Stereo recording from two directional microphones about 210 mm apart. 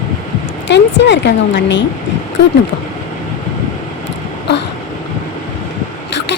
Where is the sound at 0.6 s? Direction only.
55° left (ahead or behind).